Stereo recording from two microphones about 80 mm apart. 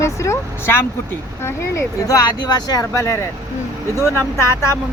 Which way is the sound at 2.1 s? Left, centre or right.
Left.